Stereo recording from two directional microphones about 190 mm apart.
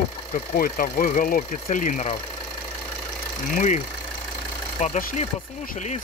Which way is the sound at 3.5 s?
40° left (ahead or behind).